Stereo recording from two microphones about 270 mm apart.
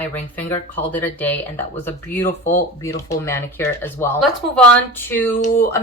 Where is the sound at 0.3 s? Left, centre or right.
Centre.